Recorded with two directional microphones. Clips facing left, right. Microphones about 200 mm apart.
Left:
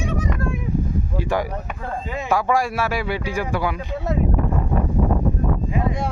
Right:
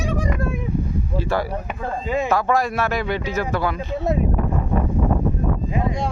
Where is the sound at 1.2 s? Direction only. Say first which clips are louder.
Even; 15° left (ahead or behind).